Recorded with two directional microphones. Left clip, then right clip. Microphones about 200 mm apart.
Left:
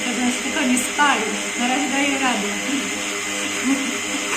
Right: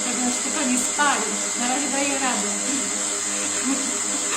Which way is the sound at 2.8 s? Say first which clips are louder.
Left 3 dB; 25° right (ahead or behind).